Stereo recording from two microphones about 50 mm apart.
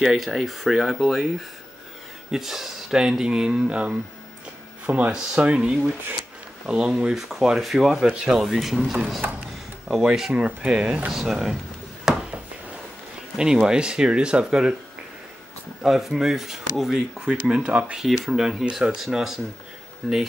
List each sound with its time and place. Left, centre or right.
0.0 s speech: centre
2.3 s speech: centre
7.2 s speech: centre
10.3 s speech: right
12.1 s a sound: centre
13.4 s speech: centre
15.8 s speech: centre
17.2 s speech: centre
17.9 s speech: centre